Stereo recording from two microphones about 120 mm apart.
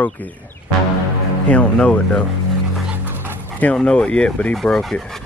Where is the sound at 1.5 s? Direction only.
10° left (ahead or behind).